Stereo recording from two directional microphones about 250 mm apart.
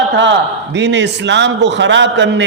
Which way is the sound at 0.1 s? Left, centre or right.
Right.